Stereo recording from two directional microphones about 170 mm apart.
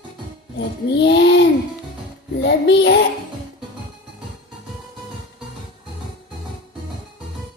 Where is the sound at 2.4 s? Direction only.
90° left.